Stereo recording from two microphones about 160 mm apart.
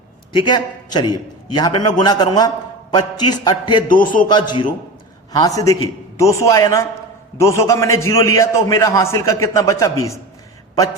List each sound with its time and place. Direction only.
0.3 s a man's voice: 30° left (ahead or behind)
4.0 s a man's voice: 60° left (ahead or behind)
4.3 s a man's voice: 30° left (ahead or behind)